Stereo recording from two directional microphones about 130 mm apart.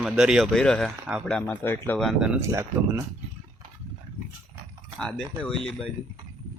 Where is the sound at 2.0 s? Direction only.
5° right (ahead or behind).